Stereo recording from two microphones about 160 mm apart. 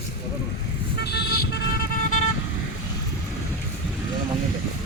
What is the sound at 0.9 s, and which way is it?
Vehicle, 90° left.